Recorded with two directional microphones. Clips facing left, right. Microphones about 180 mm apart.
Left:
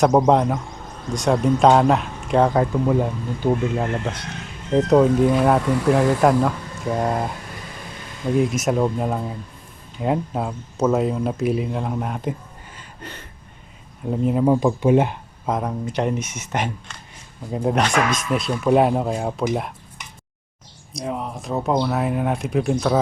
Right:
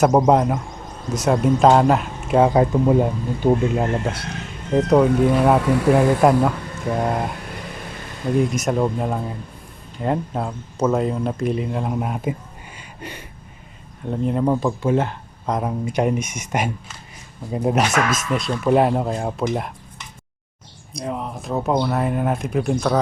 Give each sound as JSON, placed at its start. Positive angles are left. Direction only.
{"t": 0.0, "sound": "speech", "side_deg": -5}
{"t": 2.9, "sound": "speech", "side_deg": -25}
{"t": 4.7, "sound": "speech", "side_deg": 0}
{"t": 8.4, "sound": "speech", "side_deg": 0}
{"t": 12.7, "sound": "a sound", "side_deg": -10}
{"t": 14.0, "sound": "speech", "side_deg": 5}
{"t": 15.4, "sound": "speech", "side_deg": 0}
{"t": 20.9, "sound": "speech", "side_deg": 0}